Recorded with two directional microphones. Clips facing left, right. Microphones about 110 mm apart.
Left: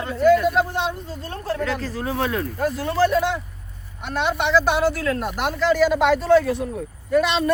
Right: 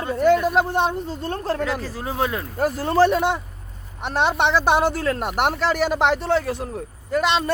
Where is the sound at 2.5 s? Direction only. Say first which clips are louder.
Right 2 dB; 40° right (ahead or behind).